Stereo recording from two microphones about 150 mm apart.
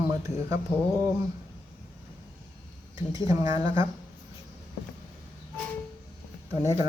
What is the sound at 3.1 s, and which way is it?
Speech, 25° right (ahead or behind).